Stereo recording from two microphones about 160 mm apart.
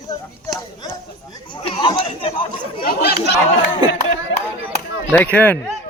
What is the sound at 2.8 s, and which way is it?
Chatter, 70° left (ahead or behind).